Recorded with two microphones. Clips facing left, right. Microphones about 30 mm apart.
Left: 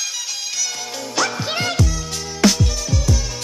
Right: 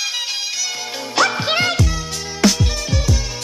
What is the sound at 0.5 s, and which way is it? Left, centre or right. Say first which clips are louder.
Music: right 1 dB; centre.